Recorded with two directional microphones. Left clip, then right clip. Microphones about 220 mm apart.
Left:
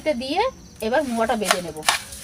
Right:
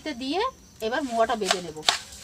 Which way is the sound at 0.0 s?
20° right (ahead or behind).